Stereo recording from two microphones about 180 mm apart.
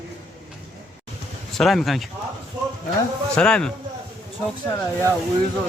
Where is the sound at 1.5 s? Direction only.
Centre (ahead or behind).